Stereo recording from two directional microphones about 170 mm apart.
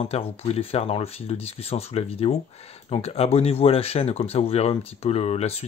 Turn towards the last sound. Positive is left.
turn(degrees=40)  # may be behind; listen again after turning